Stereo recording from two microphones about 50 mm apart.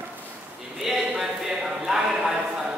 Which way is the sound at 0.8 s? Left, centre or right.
Centre.